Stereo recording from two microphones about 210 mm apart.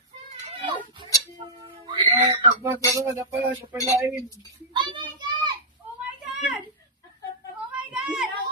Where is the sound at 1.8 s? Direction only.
20° right (ahead or behind).